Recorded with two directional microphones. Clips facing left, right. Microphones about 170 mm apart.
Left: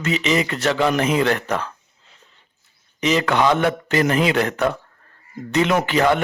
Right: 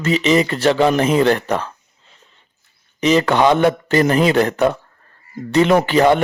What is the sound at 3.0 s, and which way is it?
Speech, 35° right (ahead or behind).